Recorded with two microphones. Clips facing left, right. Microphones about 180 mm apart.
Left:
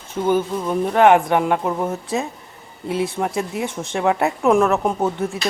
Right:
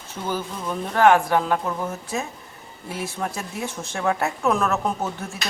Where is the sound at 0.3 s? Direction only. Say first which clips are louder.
Left 8 dB; 20° left (ahead or behind).